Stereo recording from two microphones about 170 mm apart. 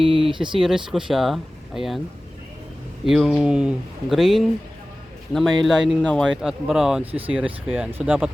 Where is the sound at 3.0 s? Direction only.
Centre (ahead or behind).